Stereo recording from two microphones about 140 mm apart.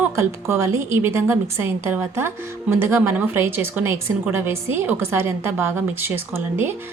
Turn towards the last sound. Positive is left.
turn(degrees=-15)  # may be behind; listen again after turning